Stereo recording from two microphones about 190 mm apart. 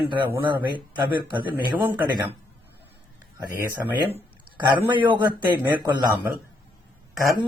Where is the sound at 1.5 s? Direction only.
10° right (ahead or behind).